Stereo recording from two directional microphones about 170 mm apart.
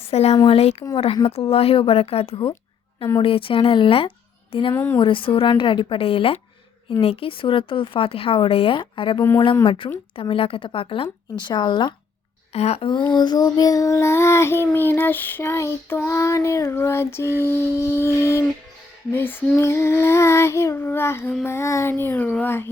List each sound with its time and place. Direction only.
0.0 s speech: 40° left (ahead or behind)
4.7 s child singing: 10° left (ahead or behind)
4.9 s speech: 30° left (ahead or behind)
12.5 s child singing: 40° left (ahead or behind); by 22.7 s 15° left (ahead or behind)